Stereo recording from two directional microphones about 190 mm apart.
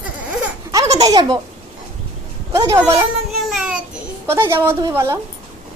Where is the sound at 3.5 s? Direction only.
Centre (ahead or behind).